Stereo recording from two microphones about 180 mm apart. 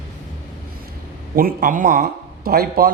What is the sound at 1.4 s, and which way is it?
A man's voice, 50° right (ahead or behind).